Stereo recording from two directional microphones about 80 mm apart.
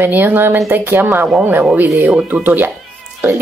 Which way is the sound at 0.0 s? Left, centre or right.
Right.